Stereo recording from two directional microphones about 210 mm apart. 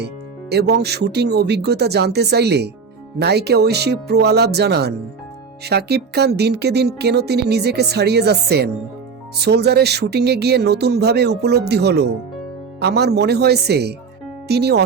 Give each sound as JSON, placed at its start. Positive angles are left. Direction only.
{"t": 0.5, "sound": "speech", "side_deg": -50}